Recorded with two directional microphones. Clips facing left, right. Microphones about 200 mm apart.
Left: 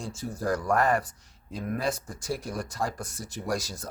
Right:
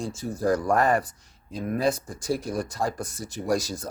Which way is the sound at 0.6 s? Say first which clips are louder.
Right 3 dB; 30° right (ahead or behind).